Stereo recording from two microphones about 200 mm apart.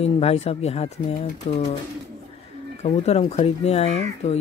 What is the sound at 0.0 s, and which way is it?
Speech, 30° left (ahead or behind).